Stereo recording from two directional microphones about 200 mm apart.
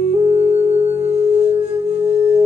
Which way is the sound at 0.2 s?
30° right (ahead or behind).